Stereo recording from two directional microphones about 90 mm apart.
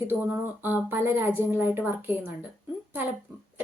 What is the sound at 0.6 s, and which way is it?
Speech, 25° right (ahead or behind).